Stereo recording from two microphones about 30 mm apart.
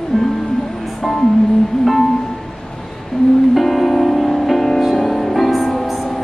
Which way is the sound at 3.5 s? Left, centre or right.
Centre.